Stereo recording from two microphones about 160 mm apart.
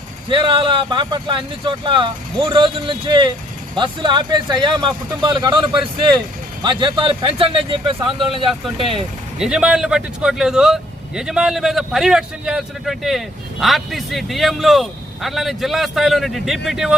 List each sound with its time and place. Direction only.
0.3 s speech: 30° right (ahead or behind)
9.4 s speech: 5° right (ahead or behind)